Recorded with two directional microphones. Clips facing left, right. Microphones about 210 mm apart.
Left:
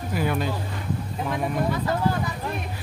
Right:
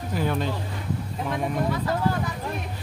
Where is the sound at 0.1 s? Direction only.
10° left (ahead or behind).